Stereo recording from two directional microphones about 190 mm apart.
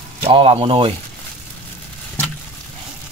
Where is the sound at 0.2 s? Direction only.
30° right (ahead or behind).